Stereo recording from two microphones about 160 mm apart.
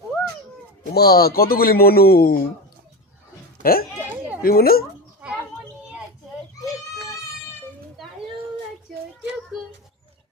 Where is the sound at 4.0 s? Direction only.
10° right (ahead or behind).